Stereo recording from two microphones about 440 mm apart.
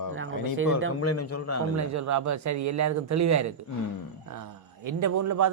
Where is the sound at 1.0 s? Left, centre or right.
Left.